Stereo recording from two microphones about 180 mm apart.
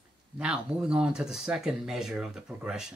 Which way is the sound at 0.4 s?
5° right (ahead or behind).